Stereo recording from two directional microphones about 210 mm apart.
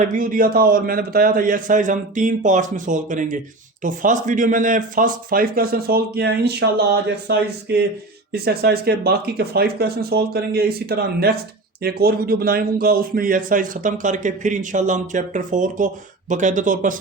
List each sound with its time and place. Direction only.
0.0 s a man's voice: 40° right (ahead or behind)